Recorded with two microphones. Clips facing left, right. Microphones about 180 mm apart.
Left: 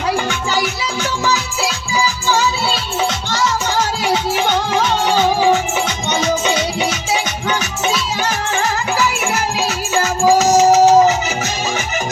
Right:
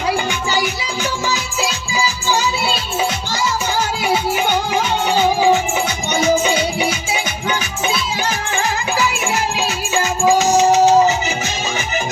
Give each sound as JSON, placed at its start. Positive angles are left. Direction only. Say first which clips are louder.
{"t": 4.0, "sound": "music", "louder": "right 1 dB", "side_deg": -10}
{"t": 6.1, "sound": "music", "louder": "right 3 dB", "side_deg": -10}
{"t": 9.6, "sound": "music", "louder": "left 1 dB", "side_deg": 35}